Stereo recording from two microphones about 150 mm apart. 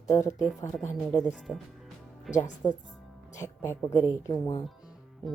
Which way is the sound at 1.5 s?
20° left (ahead or behind).